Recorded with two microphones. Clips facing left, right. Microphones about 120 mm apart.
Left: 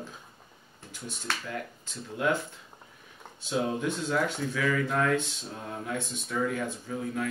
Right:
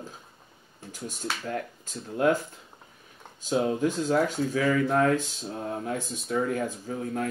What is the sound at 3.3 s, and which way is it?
Speech, 40° right (ahead or behind).